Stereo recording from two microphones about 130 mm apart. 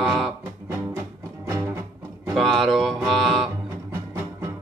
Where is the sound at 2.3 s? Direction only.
Centre (ahead or behind).